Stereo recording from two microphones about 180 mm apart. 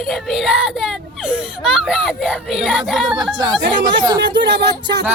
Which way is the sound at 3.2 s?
25° right (ahead or behind).